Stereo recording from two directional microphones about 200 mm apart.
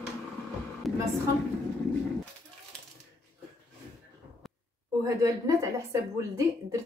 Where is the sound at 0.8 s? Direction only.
Centre (ahead or behind).